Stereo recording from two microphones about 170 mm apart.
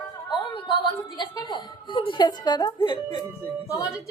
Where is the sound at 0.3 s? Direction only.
25° left (ahead or behind).